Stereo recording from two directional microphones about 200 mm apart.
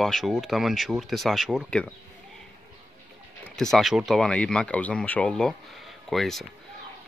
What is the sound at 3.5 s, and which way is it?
Speech, centre (ahead or behind).